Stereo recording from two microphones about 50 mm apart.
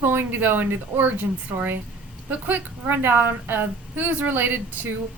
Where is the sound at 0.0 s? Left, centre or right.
Right.